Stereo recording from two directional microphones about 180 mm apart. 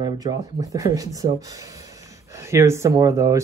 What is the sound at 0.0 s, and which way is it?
Speech, 20° right (ahead or behind).